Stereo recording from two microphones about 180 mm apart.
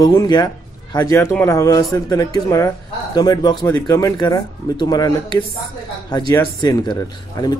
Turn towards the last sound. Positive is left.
turn(degrees=25)  # may be behind; listen again after turning